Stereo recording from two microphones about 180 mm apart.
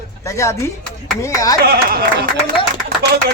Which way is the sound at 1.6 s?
55° right (ahead or behind).